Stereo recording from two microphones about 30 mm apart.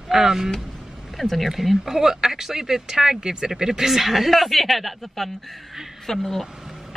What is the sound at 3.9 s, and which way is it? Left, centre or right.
Speech, centre.